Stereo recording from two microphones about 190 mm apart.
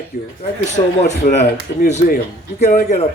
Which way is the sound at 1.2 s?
40° left (ahead or behind).